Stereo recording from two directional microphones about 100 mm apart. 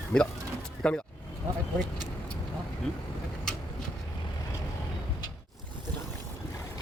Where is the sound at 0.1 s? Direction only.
30° left (ahead or behind).